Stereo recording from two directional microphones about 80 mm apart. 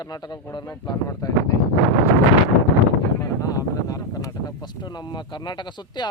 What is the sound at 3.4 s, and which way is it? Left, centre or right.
Speech, left.